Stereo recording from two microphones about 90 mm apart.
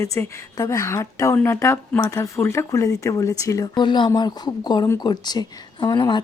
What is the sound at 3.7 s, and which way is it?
Speech, 60° left (ahead or behind).